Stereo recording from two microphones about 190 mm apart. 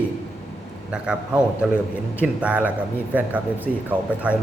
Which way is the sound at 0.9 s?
5° right (ahead or behind).